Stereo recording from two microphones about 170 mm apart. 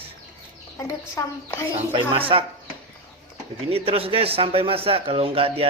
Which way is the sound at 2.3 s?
30° right (ahead or behind).